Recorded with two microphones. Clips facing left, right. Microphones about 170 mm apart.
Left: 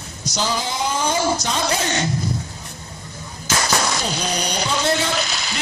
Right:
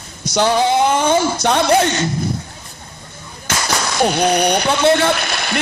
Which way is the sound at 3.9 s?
60° right (ahead or behind).